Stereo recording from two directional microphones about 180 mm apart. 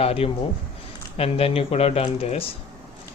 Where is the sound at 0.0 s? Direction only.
35° left (ahead or behind).